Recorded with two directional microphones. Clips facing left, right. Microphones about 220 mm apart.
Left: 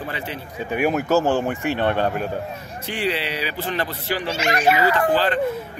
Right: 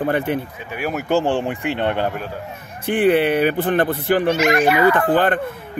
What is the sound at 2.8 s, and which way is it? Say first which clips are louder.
Speech: right 10 dB; 55° right (ahead or behind).